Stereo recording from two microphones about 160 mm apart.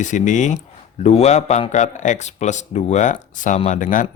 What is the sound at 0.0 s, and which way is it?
Speech, 50° left (ahead or behind).